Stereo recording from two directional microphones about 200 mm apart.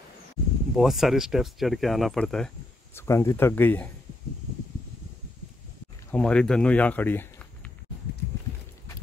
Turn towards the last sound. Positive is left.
turn(degrees=10)  # may be behind; listen again after turning